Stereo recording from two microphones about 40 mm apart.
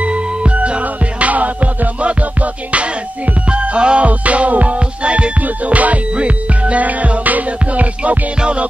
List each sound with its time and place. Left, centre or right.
0.0 s music: right
3.5 s music: right
8.4 s music: right